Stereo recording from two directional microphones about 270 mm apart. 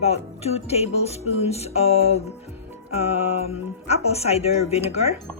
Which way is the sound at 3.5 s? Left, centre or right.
Left.